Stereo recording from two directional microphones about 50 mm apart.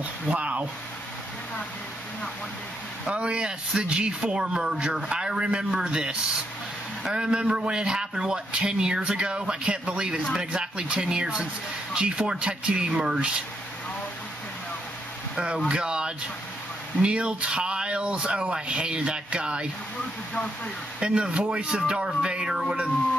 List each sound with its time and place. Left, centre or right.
0.3 s speech: right
3.1 s speech: right
7.2 s speech: centre
15.3 s speech: centre
21.0 s speech: right